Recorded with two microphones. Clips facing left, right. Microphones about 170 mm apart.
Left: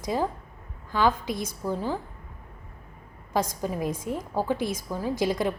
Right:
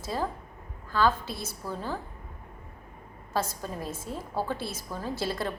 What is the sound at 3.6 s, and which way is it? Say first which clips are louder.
A woman's voice: left 7 dB; 15° left (ahead or behind).